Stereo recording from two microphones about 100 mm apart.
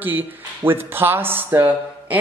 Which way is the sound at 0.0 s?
20° right (ahead or behind).